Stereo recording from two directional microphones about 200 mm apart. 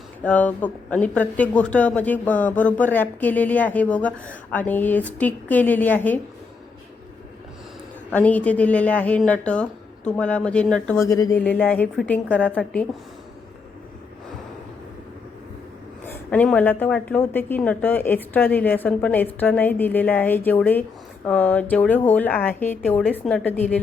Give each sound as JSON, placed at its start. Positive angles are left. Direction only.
{"t": 0.2, "sound": "speech", "side_deg": 5}
{"t": 8.1, "sound": "speech", "side_deg": 5}
{"t": 11.1, "sound": "speech", "side_deg": 15}
{"t": 16.0, "sound": "speech", "side_deg": 10}